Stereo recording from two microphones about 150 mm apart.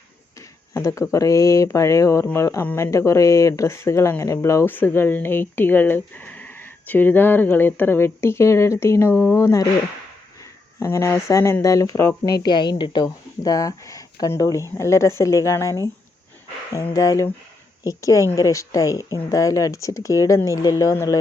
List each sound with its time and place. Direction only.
0.7 s speech: 20° left (ahead or behind)
10.8 s speech: 20° left (ahead or behind)